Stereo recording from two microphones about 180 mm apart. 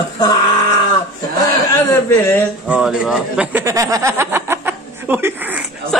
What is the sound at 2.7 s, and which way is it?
Speech, 5° right (ahead or behind).